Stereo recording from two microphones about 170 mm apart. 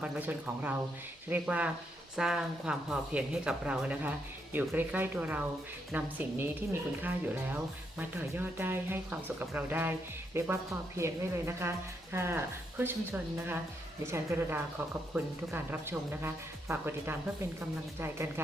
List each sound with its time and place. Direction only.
0.0 s speech: 10° right (ahead or behind)